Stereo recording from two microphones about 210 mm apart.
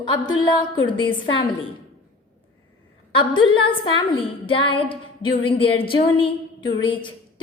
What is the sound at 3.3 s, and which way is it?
A woman's voice, 20° left (ahead or behind).